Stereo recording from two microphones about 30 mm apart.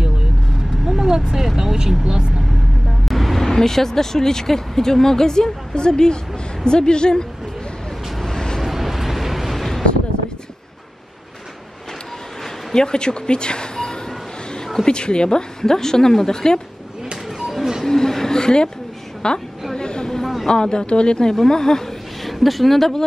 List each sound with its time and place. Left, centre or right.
0.8 s vehicle: centre
1.6 s speech: centre
3.1 s vehicle: centre
3.4 s a woman's voice: centre
8.3 s vehicle: left
8.5 s vehicle: centre
9.6 s a sound: centre
12.7 s a woman's voice: left
17.8 s vehicle: centre
19.2 s a woman's voice: left
19.7 s a sound: left
20.4 s a woman's voice: left
22.2 s speech: centre